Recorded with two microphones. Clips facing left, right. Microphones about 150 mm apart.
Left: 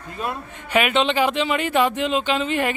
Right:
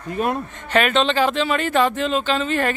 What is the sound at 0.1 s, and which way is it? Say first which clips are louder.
Speech: right 6 dB; 55° right (ahead or behind).